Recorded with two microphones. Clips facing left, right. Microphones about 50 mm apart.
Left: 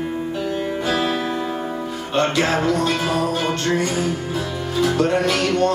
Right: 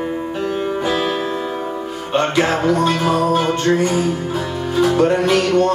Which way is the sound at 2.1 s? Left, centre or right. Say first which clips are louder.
Right 2 dB; centre.